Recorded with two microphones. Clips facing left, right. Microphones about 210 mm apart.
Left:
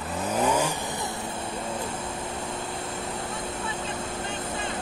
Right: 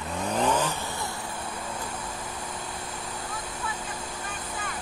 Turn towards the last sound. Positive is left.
turn(degrees=25)  # may be behind; listen again after turning